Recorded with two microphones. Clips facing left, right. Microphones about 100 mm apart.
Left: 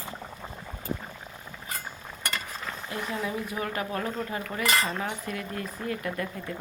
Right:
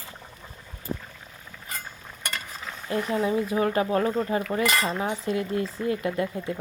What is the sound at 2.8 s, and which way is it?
Speech, 25° right (ahead or behind).